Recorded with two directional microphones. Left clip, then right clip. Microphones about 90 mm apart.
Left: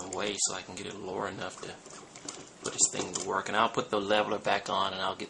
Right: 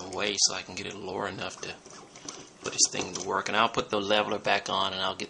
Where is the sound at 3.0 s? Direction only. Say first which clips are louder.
Right 1 dB; 5° right (ahead or behind).